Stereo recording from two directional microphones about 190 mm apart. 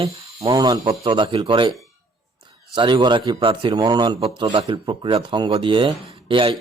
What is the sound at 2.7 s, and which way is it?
Speech, 25° right (ahead or behind).